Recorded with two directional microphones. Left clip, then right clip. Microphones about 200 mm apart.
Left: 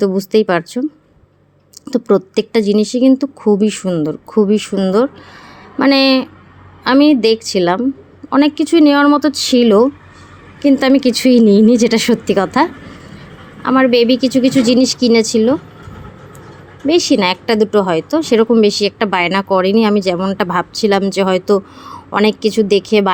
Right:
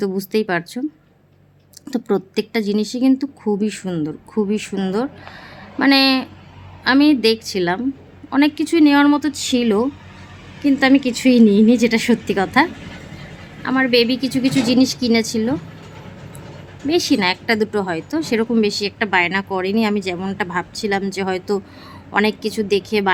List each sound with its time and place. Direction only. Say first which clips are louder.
0.0 s a woman's voice: left 7 dB; 10° left (ahead or behind)
1.9 s a woman's voice: left 7 dB; 10° left (ahead or behind)
16.8 s a woman's voice: left 5 dB; 15° left (ahead or behind)